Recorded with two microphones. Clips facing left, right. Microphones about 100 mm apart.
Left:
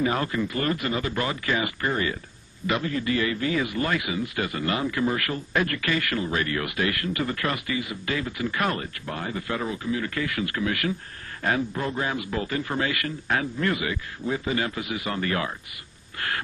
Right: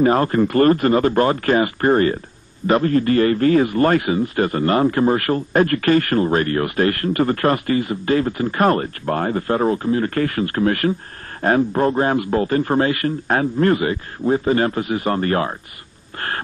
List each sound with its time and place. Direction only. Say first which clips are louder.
0.0 s a man's voice: right 10 dB; 45° right (ahead or behind)